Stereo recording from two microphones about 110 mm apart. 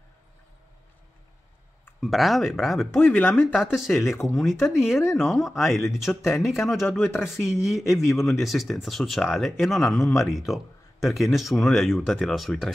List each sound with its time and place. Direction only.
2.0 s speech: centre (ahead or behind)
3.0 s speech: 15° left (ahead or behind)
3.5 s speech: centre (ahead or behind)